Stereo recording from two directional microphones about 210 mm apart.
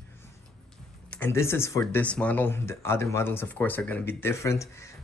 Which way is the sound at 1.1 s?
10° left (ahead or behind).